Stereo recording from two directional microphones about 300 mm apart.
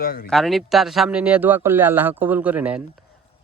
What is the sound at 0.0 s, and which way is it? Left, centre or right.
Speech, left.